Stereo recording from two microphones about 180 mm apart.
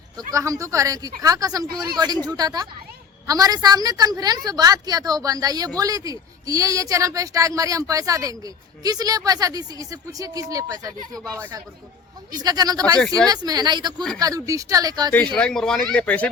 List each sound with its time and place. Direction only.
0.2 s a woman's voice: 20° right (ahead or behind)
15.4 s speech: 5° left (ahead or behind)